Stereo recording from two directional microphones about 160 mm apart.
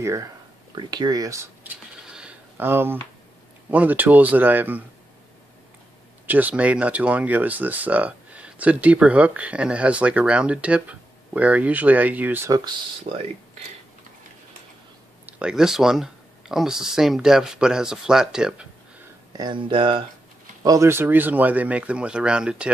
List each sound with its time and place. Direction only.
0.0 s speech: 20° right (ahead or behind)
2.0 s a sound: 5° right (ahead or behind)
3.7 s speech: 10° right (ahead or behind)
6.2 s speech: 10° right (ahead or behind)
13.1 s speech: 50° right (ahead or behind)
15.2 s speech: 5° right (ahead or behind)
19.3 s speech: 30° right (ahead or behind)
20.6 s speech: 20° right (ahead or behind)